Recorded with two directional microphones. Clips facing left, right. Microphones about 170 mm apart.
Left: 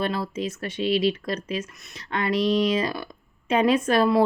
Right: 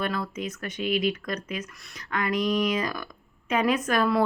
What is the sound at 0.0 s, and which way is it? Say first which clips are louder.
A woman's voice: left 3 dB; 30° left (ahead or behind).